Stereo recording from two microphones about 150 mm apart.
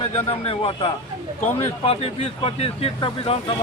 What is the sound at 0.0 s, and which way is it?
Speech, 45° left (ahead or behind).